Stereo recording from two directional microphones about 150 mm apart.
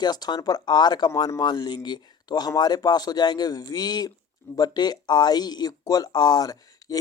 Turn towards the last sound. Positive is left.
turn(degrees=25)  # may be behind; listen again after turning